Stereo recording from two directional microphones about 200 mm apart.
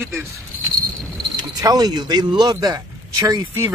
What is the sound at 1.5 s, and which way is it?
A man's voice, 20° right (ahead or behind).